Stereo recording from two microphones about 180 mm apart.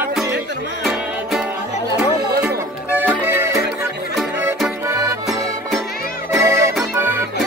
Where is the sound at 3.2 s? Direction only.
15° right (ahead or behind).